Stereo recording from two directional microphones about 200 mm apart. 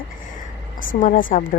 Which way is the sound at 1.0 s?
40° left (ahead or behind).